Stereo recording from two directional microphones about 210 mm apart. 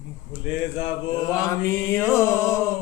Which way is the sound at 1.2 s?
15° left (ahead or behind).